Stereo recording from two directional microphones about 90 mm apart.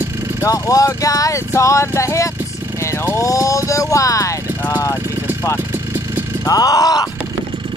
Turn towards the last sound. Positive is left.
turn(degrees=45)  # may be behind; listen again after turning